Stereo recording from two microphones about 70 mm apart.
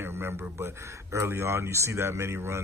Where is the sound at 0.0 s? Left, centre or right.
Right.